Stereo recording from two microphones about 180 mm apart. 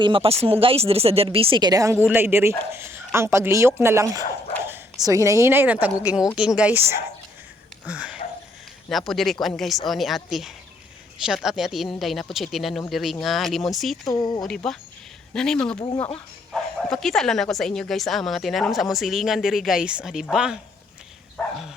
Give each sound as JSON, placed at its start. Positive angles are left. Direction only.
{"t": 0.0, "sound": "a woman's voice", "side_deg": -30}
{"t": 14.0, "sound": "speech", "side_deg": 25}
{"t": 14.4, "sound": "a woman's voice", "side_deg": 5}
{"t": 16.9, "sound": "a woman's voice", "side_deg": 0}